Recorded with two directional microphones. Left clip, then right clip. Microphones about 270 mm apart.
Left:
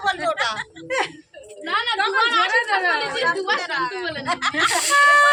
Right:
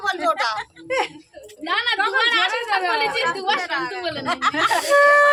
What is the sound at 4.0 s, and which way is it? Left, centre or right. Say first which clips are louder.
Speech: right 1 dB; right.